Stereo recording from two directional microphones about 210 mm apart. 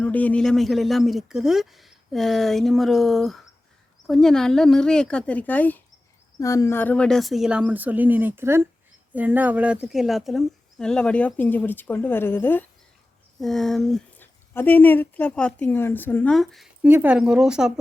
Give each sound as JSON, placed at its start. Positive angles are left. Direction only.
{"t": 0.0, "sound": "speech", "side_deg": 5}